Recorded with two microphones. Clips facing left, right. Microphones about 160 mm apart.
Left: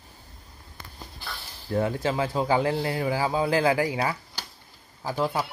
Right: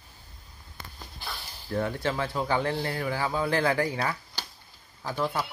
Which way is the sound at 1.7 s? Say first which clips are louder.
Left 3 dB; 20° left (ahead or behind).